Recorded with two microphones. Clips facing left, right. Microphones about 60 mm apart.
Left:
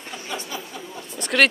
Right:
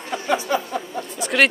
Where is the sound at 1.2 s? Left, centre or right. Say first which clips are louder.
Right 1 dB; centre.